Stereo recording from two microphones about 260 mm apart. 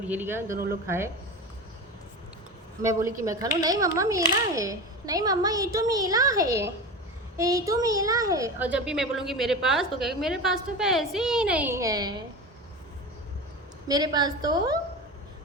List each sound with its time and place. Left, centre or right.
0.1 s a woman's voice: centre
0.5 s a woman's voice: right
0.9 s a woman's voice: centre
2.8 s a woman's voice: centre
13.8 s a woman's voice: centre